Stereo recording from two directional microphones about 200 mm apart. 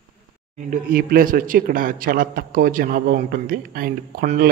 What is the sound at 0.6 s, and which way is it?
Speech, 45° right (ahead or behind).